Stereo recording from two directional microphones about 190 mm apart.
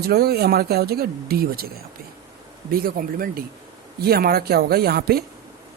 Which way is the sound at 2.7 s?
50° right (ahead or behind).